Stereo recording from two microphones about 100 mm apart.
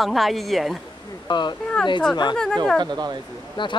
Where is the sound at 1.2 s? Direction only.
50° left (ahead or behind).